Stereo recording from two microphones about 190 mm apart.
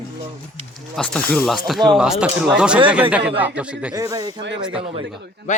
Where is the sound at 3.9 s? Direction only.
15° right (ahead or behind).